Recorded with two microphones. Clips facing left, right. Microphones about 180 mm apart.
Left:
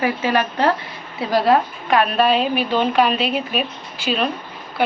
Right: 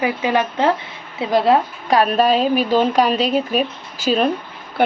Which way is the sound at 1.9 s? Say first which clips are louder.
Right 1 dB; 40° right (ahead or behind).